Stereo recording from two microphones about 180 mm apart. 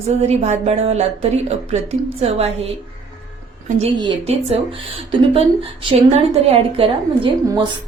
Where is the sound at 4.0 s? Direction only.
30° right (ahead or behind).